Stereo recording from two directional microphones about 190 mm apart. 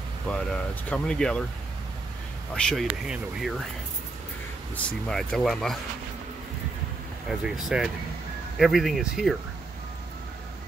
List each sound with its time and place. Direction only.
0.3 s speech: 5° left (ahead or behind)
2.5 s speech: centre (ahead or behind)
4.7 s speech: 5° left (ahead or behind)
7.2 s speech: centre (ahead or behind)